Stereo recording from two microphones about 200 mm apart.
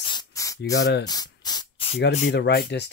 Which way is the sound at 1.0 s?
20° left (ahead or behind).